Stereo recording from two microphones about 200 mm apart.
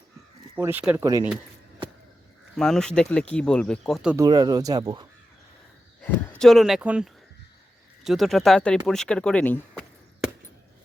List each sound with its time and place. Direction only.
0.5 s speech: 10° right (ahead or behind)
2.6 s speech: 5° left (ahead or behind)
4.2 s speech: 20° right (ahead or behind)
6.4 s speech: centre (ahead or behind)